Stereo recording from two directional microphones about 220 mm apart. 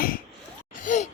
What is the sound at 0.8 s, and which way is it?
Gasp, 35° left (ahead or behind).